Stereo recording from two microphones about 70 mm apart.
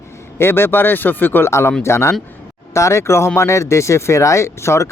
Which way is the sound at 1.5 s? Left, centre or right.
Left.